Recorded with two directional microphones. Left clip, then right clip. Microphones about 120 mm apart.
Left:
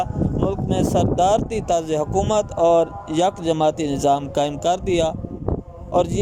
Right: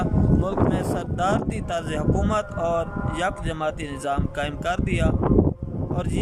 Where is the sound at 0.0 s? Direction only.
25° left (ahead or behind).